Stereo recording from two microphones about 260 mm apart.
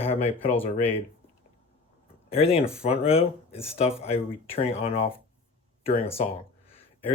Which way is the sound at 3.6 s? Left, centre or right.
Left.